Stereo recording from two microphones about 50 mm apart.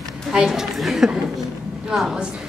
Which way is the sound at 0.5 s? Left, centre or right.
Centre.